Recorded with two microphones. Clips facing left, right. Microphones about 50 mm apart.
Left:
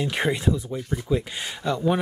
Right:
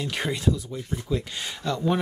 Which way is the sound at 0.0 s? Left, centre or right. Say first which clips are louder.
Left 3 dB; centre.